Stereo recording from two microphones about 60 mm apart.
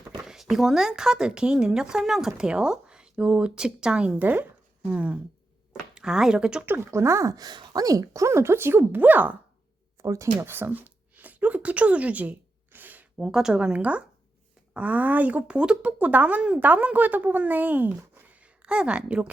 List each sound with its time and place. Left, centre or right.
0.3 s speech: centre
4.2 s speech: right
5.9 s speech: centre
6.9 s speech: right
9.0 s speech: right
10.0 s speech: right
10.4 s a sound: right
13.1 s speech: centre